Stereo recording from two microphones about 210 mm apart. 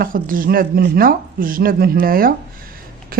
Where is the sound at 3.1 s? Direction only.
45° right (ahead or behind).